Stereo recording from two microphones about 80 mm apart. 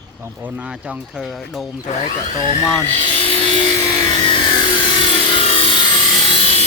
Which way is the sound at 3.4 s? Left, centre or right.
Left.